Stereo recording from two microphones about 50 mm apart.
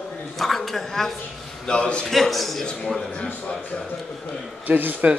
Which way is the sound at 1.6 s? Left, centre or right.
Left.